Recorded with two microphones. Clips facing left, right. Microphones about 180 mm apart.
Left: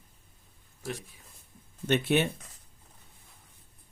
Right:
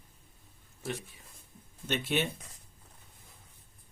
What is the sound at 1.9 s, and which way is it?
Speech, 55° left (ahead or behind).